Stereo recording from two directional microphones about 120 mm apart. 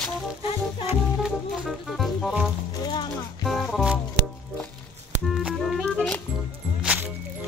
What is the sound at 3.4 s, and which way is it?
Music, centre (ahead or behind).